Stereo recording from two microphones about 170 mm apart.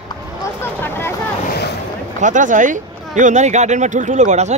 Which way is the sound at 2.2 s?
50° right (ahead or behind).